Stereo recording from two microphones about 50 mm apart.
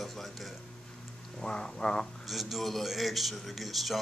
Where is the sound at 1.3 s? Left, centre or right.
Centre.